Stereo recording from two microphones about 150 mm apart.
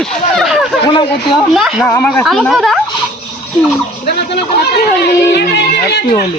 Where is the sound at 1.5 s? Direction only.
Centre (ahead or behind).